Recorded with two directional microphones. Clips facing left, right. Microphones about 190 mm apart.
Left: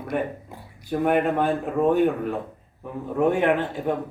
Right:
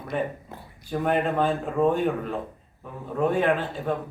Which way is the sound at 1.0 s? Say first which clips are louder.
Left 2 dB; 10° left (ahead or behind).